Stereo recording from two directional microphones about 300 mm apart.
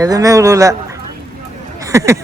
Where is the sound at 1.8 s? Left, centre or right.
Centre.